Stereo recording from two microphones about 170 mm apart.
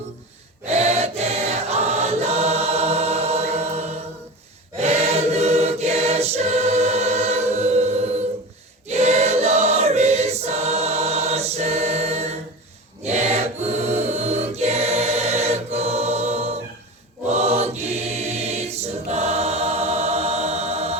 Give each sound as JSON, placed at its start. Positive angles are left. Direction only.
{"t": 0.6, "sound": "choir", "side_deg": -40}